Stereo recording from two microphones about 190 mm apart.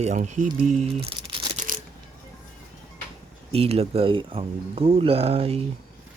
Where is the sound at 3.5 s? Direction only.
30° right (ahead or behind).